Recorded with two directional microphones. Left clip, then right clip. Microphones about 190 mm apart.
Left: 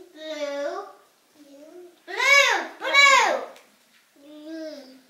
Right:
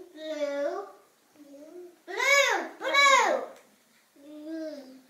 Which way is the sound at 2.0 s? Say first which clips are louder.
Left 5 dB; 5° right (ahead or behind).